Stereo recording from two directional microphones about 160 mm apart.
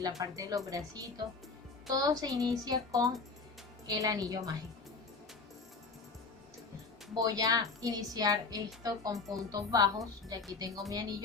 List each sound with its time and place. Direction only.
0.2 s a woman's voice: 20° right (ahead or behind)
7.1 s a woman's voice: 25° right (ahead or behind)